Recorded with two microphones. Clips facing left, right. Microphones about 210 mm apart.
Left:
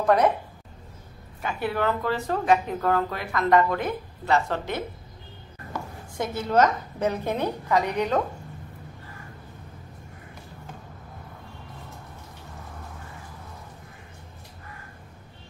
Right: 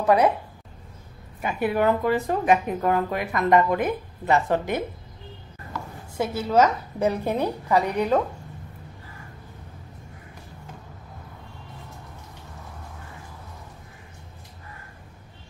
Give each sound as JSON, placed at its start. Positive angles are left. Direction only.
{"t": 0.0, "sound": "speech", "side_deg": -10}
{"t": 1.4, "sound": "speech", "side_deg": -15}
{"t": 6.1, "sound": "speech", "side_deg": -10}